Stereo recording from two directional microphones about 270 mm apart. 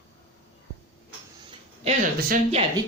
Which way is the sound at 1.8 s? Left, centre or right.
Right.